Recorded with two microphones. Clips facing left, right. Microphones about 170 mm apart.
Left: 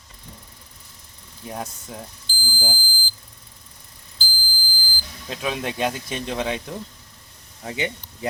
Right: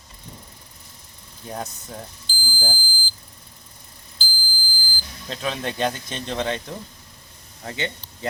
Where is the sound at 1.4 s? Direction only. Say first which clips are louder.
Even; 5° left (ahead or behind).